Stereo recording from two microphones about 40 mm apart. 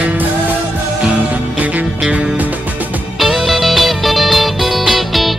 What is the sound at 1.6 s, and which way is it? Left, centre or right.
Music, right.